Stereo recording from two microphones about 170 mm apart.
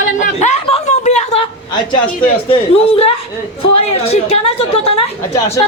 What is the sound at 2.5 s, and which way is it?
A woman's voice, 35° left (ahead or behind).